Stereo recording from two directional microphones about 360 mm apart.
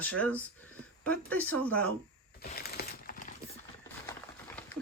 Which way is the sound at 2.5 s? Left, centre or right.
Left.